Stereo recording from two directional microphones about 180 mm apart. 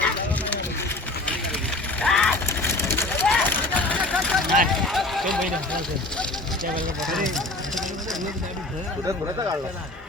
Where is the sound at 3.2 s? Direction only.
5° left (ahead or behind).